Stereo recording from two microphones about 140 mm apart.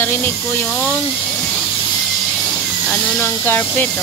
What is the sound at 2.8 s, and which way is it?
Speech, 15° left (ahead or behind).